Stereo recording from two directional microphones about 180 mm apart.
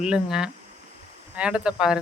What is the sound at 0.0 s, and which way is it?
Speech, 5° right (ahead or behind).